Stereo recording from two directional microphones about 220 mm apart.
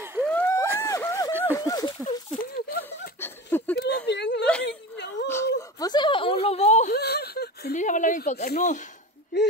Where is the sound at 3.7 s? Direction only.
50° left (ahead or behind).